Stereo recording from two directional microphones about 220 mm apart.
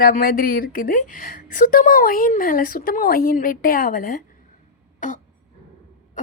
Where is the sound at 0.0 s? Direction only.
40° left (ahead or behind).